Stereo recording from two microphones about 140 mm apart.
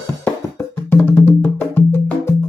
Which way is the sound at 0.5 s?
15° left (ahead or behind).